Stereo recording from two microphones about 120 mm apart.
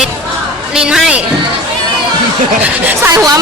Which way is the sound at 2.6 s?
15° right (ahead or behind).